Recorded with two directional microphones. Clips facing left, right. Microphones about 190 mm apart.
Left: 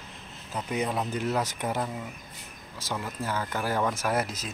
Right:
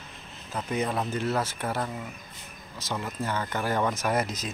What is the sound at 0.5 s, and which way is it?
Speech, 10° left (ahead or behind).